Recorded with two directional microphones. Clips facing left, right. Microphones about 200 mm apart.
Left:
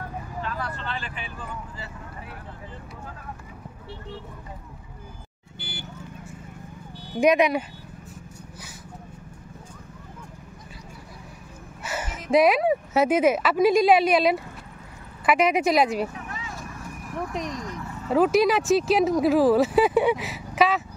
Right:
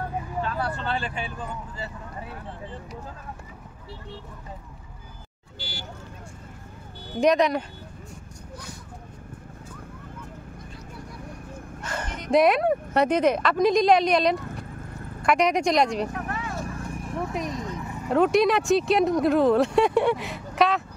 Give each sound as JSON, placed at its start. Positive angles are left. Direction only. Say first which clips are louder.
{"t": 0.7, "sound": "vehicle", "louder": "right 5 dB", "side_deg": -35}
{"t": 5.6, "sound": "vehicle", "louder": "even", "side_deg": 55}
{"t": 7.2, "sound": "speech", "louder": "left 1 dB", "side_deg": 10}
{"t": 11.8, "sound": "speech", "louder": "left 1 dB", "side_deg": 5}
{"t": 16.1, "sound": "vehicle", "louder": "right 5 dB", "side_deg": -60}
{"t": 16.5, "sound": "clip-clop", "louder": "right 5 dB", "side_deg": -30}
{"t": 17.5, "sound": "a sound", "louder": "right 1 dB", "side_deg": -20}
{"t": 18.1, "sound": "speech", "louder": "even", "side_deg": 0}